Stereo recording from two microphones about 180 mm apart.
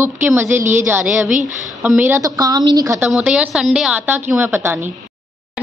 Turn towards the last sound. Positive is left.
turn(degrees=-10)  # may be behind; listen again after turning